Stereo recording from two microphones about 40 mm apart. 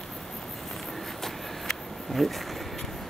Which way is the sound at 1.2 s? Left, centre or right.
Centre.